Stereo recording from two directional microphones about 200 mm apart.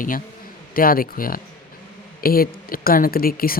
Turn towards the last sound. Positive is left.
turn(degrees=45)  # may be behind; listen again after turning